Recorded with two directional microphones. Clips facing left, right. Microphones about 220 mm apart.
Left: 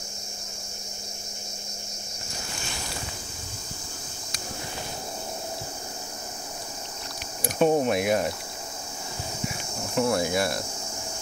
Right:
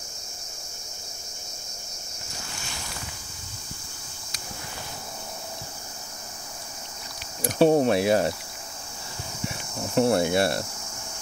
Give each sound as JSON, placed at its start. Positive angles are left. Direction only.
{"t": 7.5, "sound": "speech", "side_deg": -35}
{"t": 9.9, "sound": "speech", "side_deg": -30}